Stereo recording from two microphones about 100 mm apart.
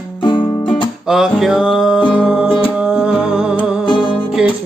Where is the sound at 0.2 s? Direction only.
55° left (ahead or behind).